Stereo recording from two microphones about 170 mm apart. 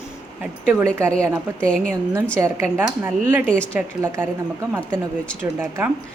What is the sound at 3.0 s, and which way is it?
A woman's voice, 10° right (ahead or behind).